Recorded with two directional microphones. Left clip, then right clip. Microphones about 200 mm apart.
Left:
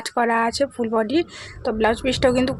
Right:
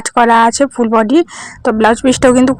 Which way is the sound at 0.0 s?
35° right (ahead or behind).